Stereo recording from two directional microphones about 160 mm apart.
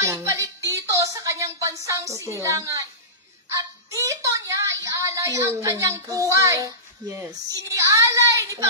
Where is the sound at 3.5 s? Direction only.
20° right (ahead or behind).